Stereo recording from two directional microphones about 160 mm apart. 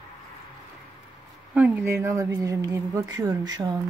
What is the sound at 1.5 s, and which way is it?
Speech, 10° right (ahead or behind).